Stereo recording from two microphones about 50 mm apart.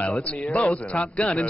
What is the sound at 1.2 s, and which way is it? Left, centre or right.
Speech, left.